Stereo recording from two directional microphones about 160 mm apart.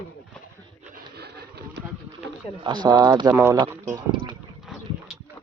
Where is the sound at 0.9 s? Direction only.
85° right.